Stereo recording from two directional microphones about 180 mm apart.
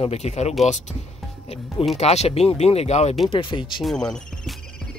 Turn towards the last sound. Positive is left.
turn(degrees=5)  # may be behind; listen again after turning